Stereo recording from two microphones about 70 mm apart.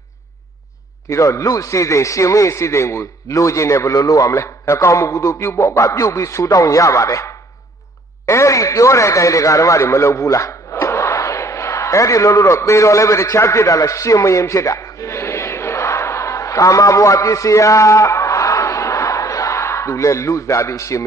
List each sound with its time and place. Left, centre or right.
1.0 s a man's voice: left